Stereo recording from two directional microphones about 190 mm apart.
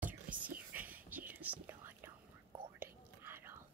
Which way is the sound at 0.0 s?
45° right (ahead or behind).